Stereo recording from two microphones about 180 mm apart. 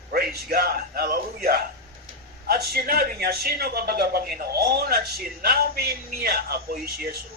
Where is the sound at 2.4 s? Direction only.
60° right (ahead or behind).